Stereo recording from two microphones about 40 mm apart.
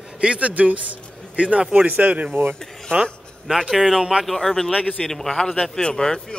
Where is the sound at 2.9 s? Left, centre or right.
Right.